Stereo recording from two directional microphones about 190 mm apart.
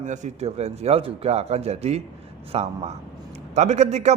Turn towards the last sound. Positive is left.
turn(degrees=-35)  # may be behind; listen again after turning